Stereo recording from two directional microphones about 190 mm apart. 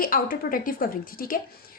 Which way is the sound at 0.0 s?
50° left (ahead or behind).